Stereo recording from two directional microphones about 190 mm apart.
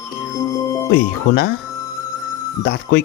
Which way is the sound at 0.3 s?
15° left (ahead or behind).